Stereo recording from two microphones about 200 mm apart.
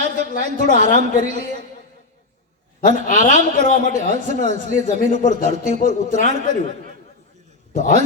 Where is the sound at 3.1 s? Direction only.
40° left (ahead or behind).